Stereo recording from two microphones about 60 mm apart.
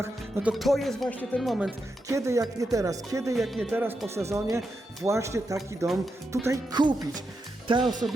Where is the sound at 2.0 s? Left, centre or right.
Right.